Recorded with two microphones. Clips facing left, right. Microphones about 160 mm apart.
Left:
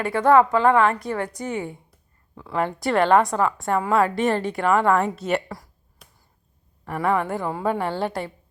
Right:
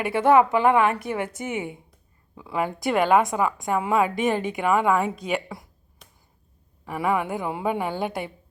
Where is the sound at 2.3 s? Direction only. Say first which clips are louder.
Left 2 dB; 10° right (ahead or behind).